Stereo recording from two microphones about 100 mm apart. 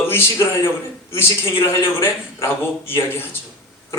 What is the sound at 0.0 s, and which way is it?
Speech, 25° left (ahead or behind).